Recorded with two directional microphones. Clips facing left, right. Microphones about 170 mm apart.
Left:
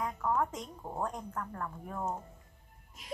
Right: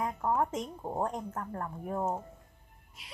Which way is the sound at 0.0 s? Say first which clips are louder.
Right 2 dB; 25° right (ahead or behind).